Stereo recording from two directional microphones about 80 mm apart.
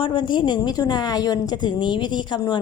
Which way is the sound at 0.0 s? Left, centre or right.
Left.